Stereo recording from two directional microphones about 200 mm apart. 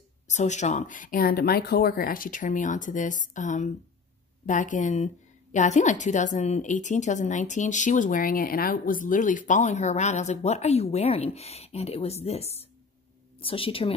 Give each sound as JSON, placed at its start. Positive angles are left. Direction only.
{"t": 0.3, "sound": "a woman's voice", "side_deg": 35}